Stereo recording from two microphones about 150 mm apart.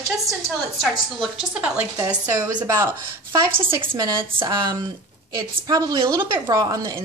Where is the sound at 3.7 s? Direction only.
30° right (ahead or behind).